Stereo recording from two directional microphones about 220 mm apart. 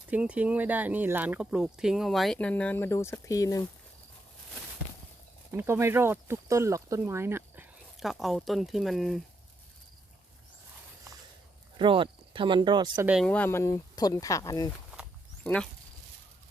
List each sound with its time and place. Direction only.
0.1 s speech: 5° right (ahead or behind); by 3.6 s 15° left (ahead or behind)
5.5 s speech: 10° right (ahead or behind)
11.8 s speech: 20° right (ahead or behind)
13.1 s speech: centre (ahead or behind)
15.4 s speech: 5° left (ahead or behind)